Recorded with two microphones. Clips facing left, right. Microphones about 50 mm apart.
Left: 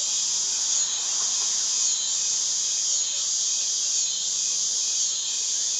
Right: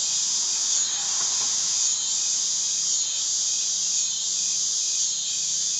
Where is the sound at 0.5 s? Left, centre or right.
Left.